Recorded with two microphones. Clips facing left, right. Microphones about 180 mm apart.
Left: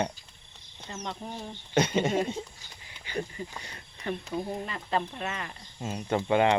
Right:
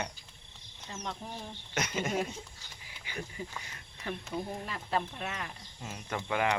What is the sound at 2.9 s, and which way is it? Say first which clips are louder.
Duck: left 6 dB; 10° right (ahead or behind).